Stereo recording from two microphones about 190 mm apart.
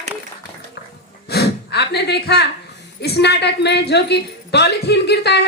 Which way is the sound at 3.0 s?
60° left (ahead or behind).